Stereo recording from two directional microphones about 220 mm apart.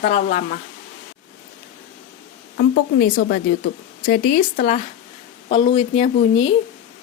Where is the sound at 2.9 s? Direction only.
40° left (ahead or behind).